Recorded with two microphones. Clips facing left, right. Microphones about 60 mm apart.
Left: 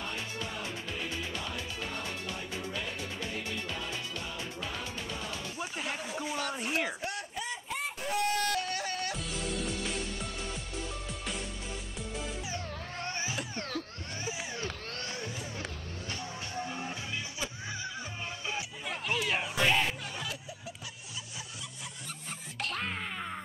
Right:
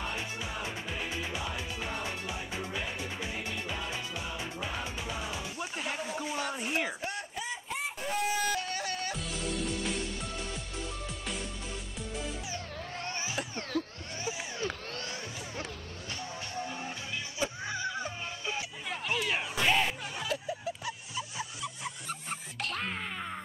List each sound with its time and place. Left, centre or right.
0.1 s music: centre
5.6 s a sound: centre
13.6 s music: centre
16.1 s music: centre
17.4 s music: centre
18.5 s music: centre
21.4 s music: right
22.6 s groan: centre